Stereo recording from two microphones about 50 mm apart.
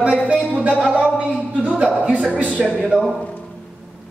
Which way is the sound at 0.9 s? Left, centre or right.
Right.